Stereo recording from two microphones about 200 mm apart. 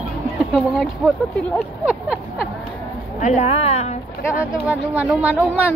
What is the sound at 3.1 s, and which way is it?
Speech, 40° left (ahead or behind).